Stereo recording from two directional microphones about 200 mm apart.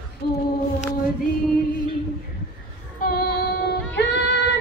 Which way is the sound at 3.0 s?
50° left (ahead or behind).